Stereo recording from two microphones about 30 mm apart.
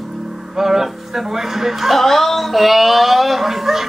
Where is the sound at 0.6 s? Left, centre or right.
Centre.